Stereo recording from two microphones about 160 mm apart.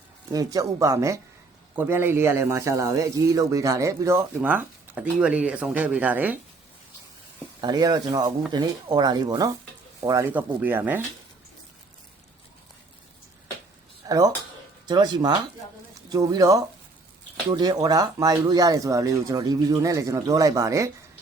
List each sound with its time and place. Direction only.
0.3 s a man's voice: 25° right (ahead or behind)
7.6 s a man's voice: 25° right (ahead or behind)
14.0 s a sound: 20° right (ahead or behind)
14.8 s speech: 25° right (ahead or behind)